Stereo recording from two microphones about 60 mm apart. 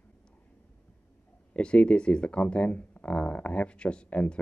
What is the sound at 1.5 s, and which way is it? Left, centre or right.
Speech, centre.